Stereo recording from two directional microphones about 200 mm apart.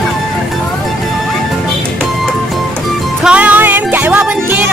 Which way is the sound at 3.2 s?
5° right (ahead or behind).